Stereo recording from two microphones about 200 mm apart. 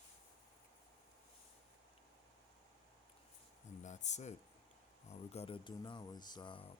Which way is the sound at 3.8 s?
35° left (ahead or behind).